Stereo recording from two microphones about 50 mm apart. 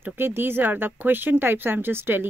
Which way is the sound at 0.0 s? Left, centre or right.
Right.